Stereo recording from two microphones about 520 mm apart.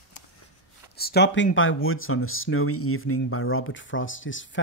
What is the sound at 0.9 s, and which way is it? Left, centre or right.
Speech, centre.